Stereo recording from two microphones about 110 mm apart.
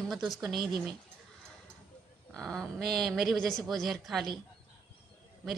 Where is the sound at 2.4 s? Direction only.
5° left (ahead or behind).